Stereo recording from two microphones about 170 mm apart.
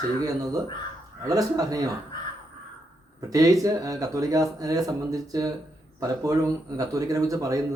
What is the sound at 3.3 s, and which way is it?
Speech, 20° right (ahead or behind).